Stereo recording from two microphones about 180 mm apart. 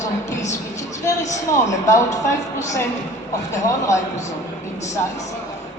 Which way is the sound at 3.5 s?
15° left (ahead or behind).